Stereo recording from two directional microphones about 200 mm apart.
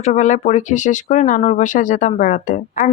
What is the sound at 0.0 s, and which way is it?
Speech, 35° left (ahead or behind).